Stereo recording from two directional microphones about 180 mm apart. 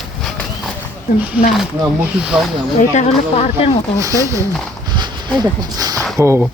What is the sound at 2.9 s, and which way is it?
Speech, 40° left (ahead or behind).